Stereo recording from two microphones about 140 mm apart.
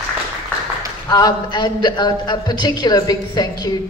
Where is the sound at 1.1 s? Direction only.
30° left (ahead or behind).